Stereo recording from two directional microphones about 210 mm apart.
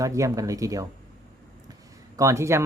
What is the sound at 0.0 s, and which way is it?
Speech, 15° right (ahead or behind).